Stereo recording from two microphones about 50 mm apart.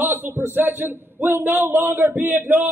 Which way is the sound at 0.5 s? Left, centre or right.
Right.